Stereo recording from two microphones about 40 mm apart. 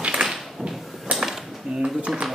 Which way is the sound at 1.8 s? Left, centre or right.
Right.